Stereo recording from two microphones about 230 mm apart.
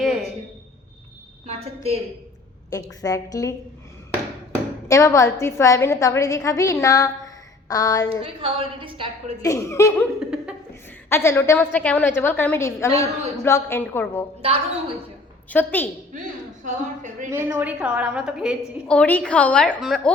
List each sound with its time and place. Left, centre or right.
0.0 s a sound: centre
1.5 s a woman's voice: right
2.6 s a woman's voice: centre
4.9 s a woman's voice: centre
8.2 s a woman's voice: right
9.4 s a woman's voice: centre
10.2 s laughter: centre
11.1 s a woman's voice: centre
15.4 s a woman's voice: centre
16.6 s a woman's voice: right
17.2 s a woman's voice: centre